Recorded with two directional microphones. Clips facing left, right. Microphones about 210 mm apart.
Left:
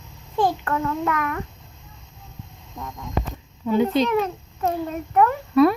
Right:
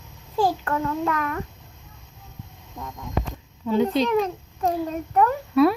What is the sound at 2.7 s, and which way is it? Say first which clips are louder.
Speech: left 1 dB; 20° right (ahead or behind).